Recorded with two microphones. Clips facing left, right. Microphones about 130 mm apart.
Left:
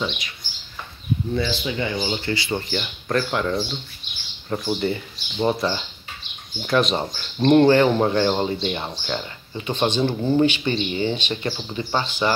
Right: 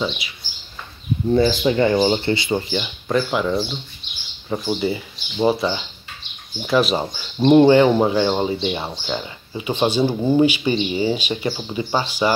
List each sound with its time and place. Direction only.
1.3 s speech: 35° right (ahead or behind); by 12.3 s 10° right (ahead or behind)